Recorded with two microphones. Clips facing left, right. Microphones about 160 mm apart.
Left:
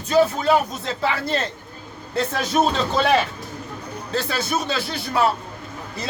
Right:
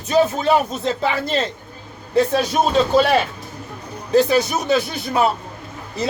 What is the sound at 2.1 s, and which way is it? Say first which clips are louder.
Speech: right 4 dB; 10° right (ahead or behind).